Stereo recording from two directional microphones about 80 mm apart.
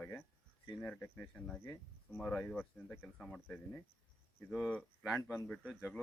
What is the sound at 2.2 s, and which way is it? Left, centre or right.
Speech, centre.